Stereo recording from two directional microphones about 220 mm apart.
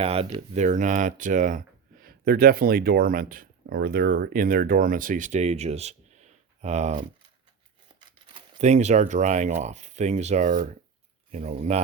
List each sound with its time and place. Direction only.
0.0 s speech: 25° right (ahead or behind)
8.3 s speech: 30° right (ahead or behind)